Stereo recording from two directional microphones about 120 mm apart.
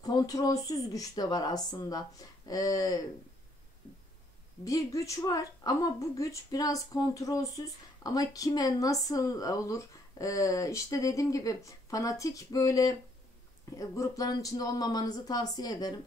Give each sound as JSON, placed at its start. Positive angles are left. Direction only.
{"t": 0.0, "sound": "a woman's voice", "side_deg": 30}
{"t": 4.6, "sound": "a woman's voice", "side_deg": 25}